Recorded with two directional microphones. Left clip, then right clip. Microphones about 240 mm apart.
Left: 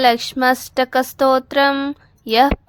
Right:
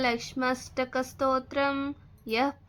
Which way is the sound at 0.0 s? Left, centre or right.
Left.